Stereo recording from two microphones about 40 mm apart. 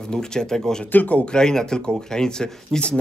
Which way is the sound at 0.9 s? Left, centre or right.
Left.